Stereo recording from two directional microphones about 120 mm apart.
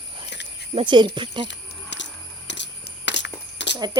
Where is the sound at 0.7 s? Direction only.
45° right (ahead or behind).